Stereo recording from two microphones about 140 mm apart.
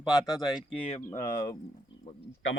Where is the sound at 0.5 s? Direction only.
40° left (ahead or behind).